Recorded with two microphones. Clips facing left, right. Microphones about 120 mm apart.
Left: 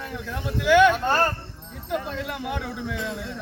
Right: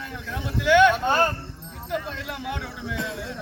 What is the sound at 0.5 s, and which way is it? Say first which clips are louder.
Speech: even; 5° left (ahead or behind).